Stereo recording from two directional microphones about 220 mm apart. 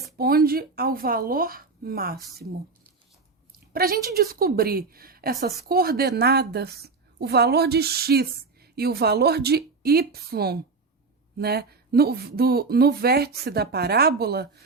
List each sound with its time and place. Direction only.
0.2 s a woman's voice: 45° right (ahead or behind)
3.7 s a woman's voice: 40° right (ahead or behind)